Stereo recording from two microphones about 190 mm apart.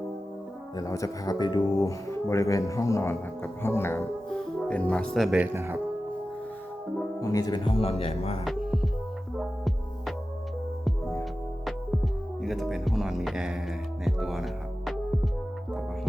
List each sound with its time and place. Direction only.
0.8 s speech: 15° left (ahead or behind); by 5.5 s centre (ahead or behind)
5.5 s speech: 15° right (ahead or behind)
7.2 s speech: 20° left (ahead or behind)
9.4 s music: centre (ahead or behind)
12.4 s speech: centre (ahead or behind)
14.0 s music: centre (ahead or behind)